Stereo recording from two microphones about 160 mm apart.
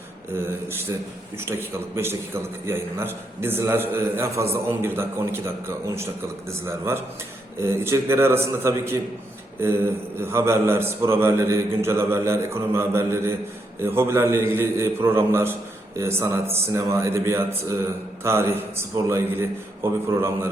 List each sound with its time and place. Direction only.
0.3 s a man's voice: 15° right (ahead or behind)